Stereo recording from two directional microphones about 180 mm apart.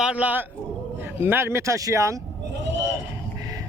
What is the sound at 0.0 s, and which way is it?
Speech, 5° right (ahead or behind).